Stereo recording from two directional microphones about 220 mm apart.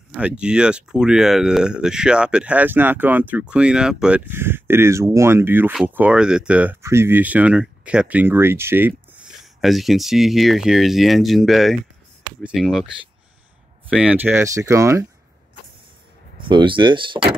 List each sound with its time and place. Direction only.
0.2 s speech: 5° right (ahead or behind)
13.8 s speech: 5° right (ahead or behind)
16.3 s speech: 20° right (ahead or behind)